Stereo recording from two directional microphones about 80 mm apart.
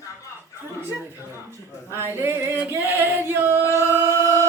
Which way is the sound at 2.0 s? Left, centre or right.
Right.